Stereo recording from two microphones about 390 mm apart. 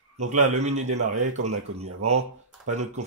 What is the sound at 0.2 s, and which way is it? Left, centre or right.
Speech, centre.